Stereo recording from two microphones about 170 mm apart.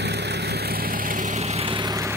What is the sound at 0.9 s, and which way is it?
Vehicle, 55° right (ahead or behind).